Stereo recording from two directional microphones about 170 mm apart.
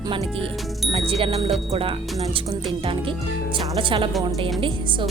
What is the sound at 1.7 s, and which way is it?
Speech, 35° right (ahead or behind).